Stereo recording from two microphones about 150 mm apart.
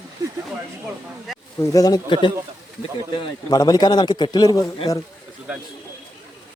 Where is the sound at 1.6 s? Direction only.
20° left (ahead or behind).